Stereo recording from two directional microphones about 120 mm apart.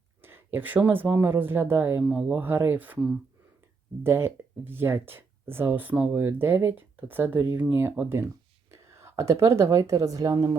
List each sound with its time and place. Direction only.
0.2 s speech: 20° right (ahead or behind)